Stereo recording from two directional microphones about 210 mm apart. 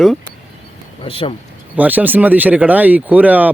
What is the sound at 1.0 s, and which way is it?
Speech, 25° left (ahead or behind).